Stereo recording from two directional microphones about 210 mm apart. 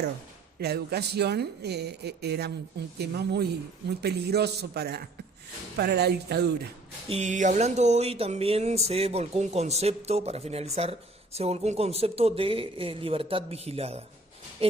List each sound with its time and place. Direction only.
0.6 s speech: 50° right (ahead or behind)
7.1 s speech: 35° right (ahead or behind)